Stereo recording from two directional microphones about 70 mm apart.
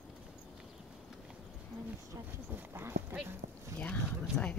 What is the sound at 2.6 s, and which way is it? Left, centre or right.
Speech, right.